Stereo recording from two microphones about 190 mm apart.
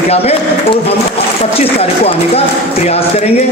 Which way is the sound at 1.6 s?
30° left (ahead or behind).